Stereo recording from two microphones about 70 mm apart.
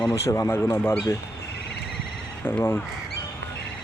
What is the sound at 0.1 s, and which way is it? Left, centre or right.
Speech, left.